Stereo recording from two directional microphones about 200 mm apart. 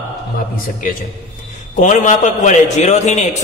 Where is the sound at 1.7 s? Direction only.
40° left (ahead or behind).